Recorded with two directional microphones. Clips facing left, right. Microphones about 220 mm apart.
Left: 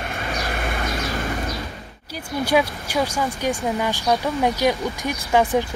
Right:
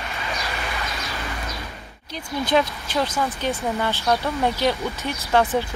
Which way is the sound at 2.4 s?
10° left (ahead or behind).